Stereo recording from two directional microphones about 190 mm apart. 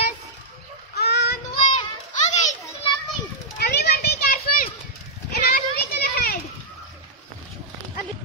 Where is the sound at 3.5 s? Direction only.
60° left (ahead or behind).